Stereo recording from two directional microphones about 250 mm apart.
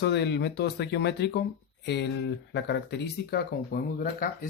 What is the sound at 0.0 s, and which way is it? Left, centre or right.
Speech, left.